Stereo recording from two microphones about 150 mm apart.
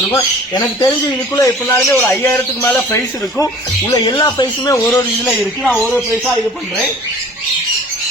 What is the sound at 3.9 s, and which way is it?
Speech, 30° left (ahead or behind).